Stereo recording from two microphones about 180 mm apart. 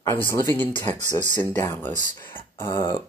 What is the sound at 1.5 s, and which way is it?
Speech, 10° left (ahead or behind).